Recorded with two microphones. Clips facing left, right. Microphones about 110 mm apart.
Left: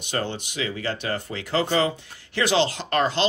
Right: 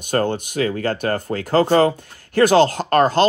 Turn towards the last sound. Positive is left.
turn(degrees=-45)  # may be behind; listen again after turning